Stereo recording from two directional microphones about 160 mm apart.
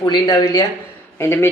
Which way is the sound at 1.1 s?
15° left (ahead or behind).